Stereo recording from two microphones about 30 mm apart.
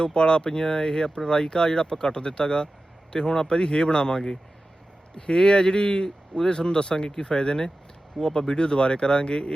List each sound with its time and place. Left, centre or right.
0.0 s speech: left